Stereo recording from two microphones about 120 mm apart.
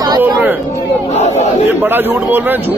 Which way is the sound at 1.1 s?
70° left (ahead or behind).